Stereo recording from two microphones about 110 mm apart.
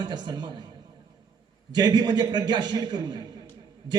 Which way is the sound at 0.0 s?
45° right (ahead or behind).